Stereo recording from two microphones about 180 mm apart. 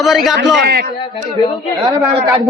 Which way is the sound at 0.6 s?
60° right (ahead or behind).